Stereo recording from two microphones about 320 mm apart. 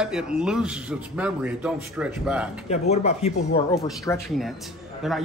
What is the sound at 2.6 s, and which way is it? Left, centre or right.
Speech, centre.